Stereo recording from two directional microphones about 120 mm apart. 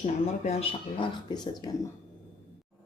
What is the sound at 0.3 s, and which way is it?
Speech, 55° left (ahead or behind).